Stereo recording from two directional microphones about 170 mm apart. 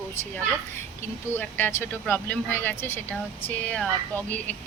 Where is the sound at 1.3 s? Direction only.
10° left (ahead or behind).